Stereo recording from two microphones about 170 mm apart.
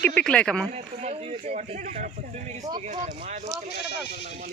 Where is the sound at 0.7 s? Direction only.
40° right (ahead or behind).